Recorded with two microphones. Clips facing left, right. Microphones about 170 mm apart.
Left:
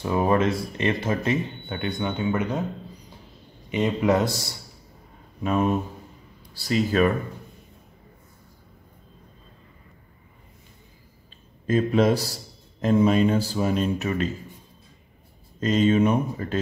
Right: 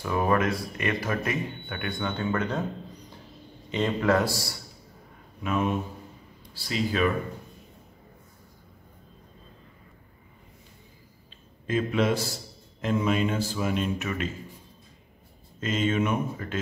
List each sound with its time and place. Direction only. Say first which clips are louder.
0.0 s speech: left 3 dB; 25° left (ahead or behind)
3.7 s speech: left 2 dB; 15° left (ahead or behind)
5.4 s speech: left 4 dB; 35° left (ahead or behind)
11.6 s speech: left 5 dB; 40° left (ahead or behind)
15.6 s speech: left 6 dB; 35° left (ahead or behind)